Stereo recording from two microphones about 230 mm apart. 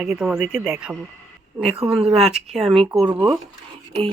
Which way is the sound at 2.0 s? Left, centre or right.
Right.